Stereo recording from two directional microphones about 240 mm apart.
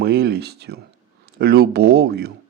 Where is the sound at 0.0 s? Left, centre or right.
Right.